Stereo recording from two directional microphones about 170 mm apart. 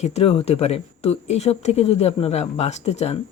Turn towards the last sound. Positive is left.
turn(degrees=40)  # may be behind; listen again after turning